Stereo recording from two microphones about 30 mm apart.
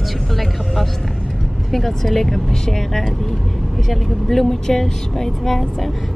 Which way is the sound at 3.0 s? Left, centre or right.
Centre.